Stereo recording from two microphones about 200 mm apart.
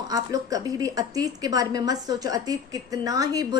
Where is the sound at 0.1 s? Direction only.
15° right (ahead or behind).